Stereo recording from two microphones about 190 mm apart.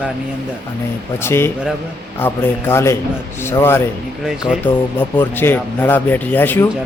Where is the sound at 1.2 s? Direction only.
10° left (ahead or behind).